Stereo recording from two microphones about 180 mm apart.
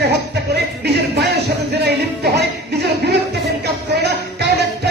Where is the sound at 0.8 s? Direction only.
65° right (ahead or behind).